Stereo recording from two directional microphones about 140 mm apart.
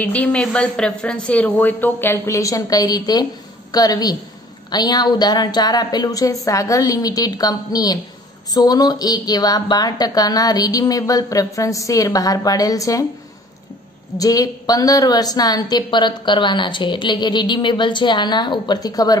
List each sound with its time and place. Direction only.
0.0 s a woman's voice: 10° left (ahead or behind)
14.1 s a woman's voice: 25° left (ahead or behind)